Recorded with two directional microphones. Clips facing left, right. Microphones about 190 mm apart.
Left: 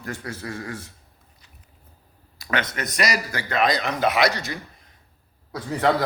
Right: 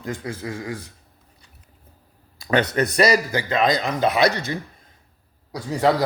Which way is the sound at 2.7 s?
30° right (ahead or behind).